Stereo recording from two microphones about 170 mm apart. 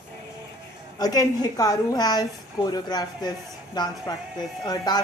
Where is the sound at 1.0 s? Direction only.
20° left (ahead or behind).